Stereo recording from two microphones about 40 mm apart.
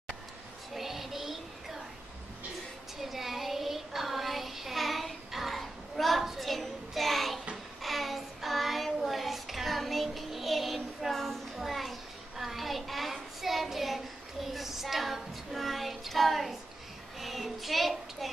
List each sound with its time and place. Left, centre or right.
0.7 s child singing: centre
3.0 s child singing: centre
11.5 s a sound: centre
17.2 s child singing: centre